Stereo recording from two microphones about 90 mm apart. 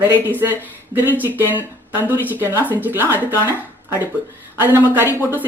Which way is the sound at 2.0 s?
20° right (ahead or behind).